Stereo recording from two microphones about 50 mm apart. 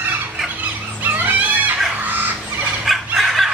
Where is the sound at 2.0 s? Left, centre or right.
Right.